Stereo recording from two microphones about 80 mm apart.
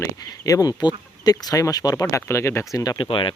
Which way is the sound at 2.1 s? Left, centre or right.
Left.